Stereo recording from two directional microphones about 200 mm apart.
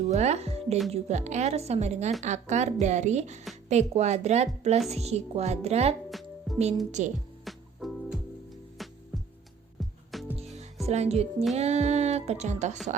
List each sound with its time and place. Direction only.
0.1 s a woman's voice: 35° right (ahead or behind)
6.1 s music: centre (ahead or behind)
7.0 s a woman's voice: 35° right (ahead or behind)
7.4 s music: centre (ahead or behind)
10.1 s music: centre (ahead or behind)
10.3 s music: 30° right (ahead or behind)
10.8 s a woman's voice: 30° right (ahead or behind)